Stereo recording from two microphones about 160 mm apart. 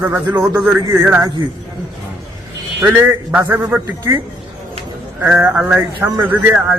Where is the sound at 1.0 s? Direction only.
15° right (ahead or behind).